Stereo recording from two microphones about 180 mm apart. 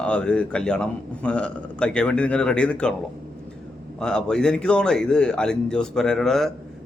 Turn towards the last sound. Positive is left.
turn(degrees=0)  # may be behind; listen again after turning